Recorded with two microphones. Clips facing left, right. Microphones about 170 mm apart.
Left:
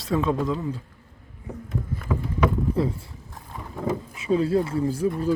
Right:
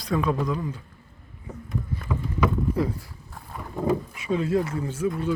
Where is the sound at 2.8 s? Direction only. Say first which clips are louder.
Left 2 dB; 30° left (ahead or behind).